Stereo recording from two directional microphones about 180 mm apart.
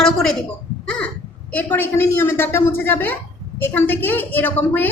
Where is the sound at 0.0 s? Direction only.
Centre (ahead or behind).